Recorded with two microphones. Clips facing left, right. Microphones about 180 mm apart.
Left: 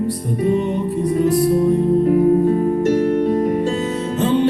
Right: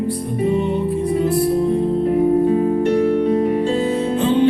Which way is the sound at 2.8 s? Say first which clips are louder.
Even; 45° left (ahead or behind).